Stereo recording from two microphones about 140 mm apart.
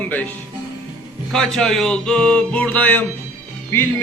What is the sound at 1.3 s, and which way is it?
Music, centre (ahead or behind).